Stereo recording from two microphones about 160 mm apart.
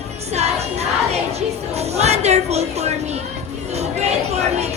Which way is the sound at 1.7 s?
40° right (ahead or behind).